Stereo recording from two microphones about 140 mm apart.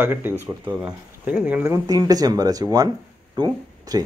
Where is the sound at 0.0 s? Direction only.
15° right (ahead or behind).